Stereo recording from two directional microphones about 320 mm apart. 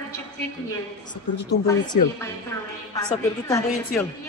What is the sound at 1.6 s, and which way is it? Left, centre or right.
Speech, centre.